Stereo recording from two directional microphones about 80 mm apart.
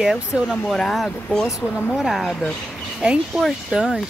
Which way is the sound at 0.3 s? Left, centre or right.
Centre.